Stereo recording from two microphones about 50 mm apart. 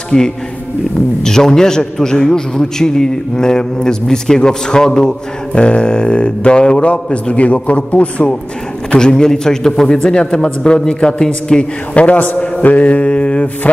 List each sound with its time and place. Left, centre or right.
0.1 s a man's voice: centre
8.9 s a man's voice: centre
11.9 s mantra: left